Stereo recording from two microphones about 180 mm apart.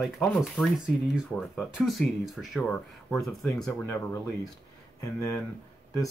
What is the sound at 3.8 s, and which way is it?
Speech, 15° left (ahead or behind).